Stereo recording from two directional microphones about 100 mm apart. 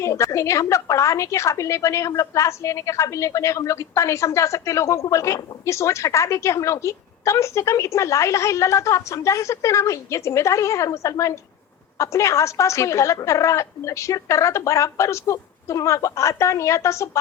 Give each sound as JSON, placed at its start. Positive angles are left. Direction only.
{"t": 0.0, "sound": "a woman's voice", "side_deg": 30}